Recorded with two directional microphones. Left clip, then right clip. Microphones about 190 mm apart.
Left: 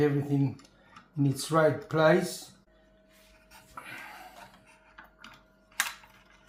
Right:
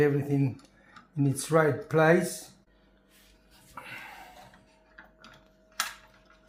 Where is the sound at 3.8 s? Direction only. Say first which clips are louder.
Right 1 dB; 30° right (ahead or behind).